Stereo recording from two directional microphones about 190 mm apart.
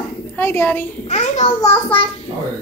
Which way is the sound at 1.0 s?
40° left (ahead or behind).